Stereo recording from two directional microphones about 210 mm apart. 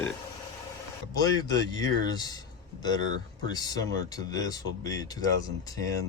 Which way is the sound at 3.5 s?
20° left (ahead or behind).